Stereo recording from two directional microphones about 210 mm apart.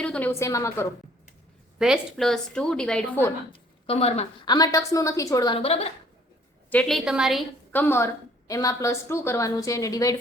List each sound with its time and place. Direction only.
0.0 s a woman's voice: 5° left (ahead or behind)
1.8 s a woman's voice: centre (ahead or behind)
3.5 s a woman's voice: 25° left (ahead or behind)
6.7 s a woman's voice: 5° left (ahead or behind)